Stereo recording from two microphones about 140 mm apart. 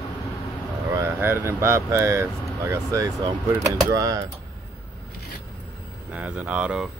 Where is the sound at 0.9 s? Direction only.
20° right (ahead or behind).